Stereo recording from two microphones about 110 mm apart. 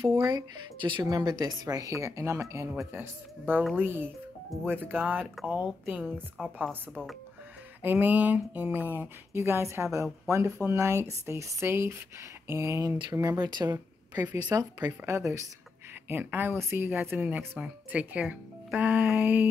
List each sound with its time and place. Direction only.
0.3 s speech: 40° right (ahead or behind)
1.0 s speech: 35° right (ahead or behind); by 6.5 s 10° right (ahead or behind)
7.8 s speech: 15° right (ahead or behind)
13.4 s speech: 40° right (ahead or behind)
13.7 s a woman's voice: 20° right (ahead or behind)
14.5 s speech: 35° right (ahead or behind)
14.9 s speech: 25° right (ahead or behind)